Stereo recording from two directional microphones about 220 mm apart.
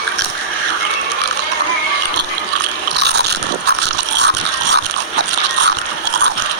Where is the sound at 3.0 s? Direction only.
50° right (ahead or behind).